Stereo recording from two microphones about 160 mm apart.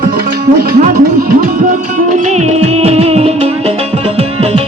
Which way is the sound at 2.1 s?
45° right (ahead or behind).